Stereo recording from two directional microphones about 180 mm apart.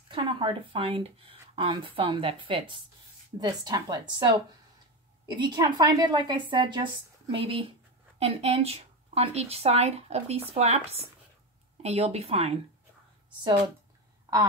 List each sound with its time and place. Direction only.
0.1 s speech: 25° right (ahead or behind)